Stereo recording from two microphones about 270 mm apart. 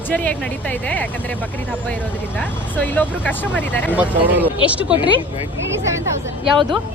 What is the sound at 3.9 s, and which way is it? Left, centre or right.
Speech, centre.